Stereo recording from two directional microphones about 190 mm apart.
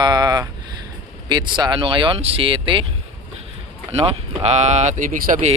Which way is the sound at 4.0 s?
35° right (ahead or behind).